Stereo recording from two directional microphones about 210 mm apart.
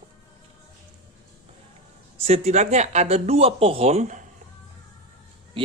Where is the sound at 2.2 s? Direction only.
30° right (ahead or behind).